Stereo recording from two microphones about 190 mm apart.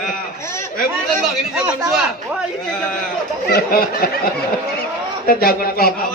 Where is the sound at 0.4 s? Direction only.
15° left (ahead or behind).